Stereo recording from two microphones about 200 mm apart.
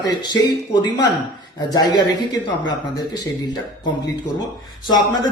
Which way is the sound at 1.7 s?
20° left (ahead or behind).